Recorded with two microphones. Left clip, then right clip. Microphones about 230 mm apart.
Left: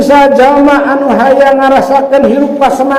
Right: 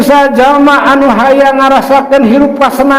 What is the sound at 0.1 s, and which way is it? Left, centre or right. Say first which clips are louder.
A man's voice: left 1 dB; right.